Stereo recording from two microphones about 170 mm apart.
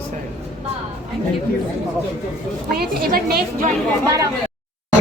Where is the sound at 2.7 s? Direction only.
60° right (ahead or behind).